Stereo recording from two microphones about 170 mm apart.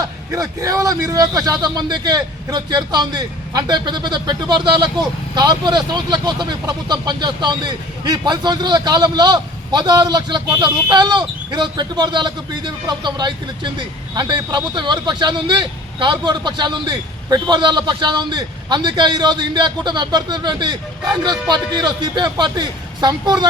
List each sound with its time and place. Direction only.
0.3 s a man's voice: 20° right (ahead or behind)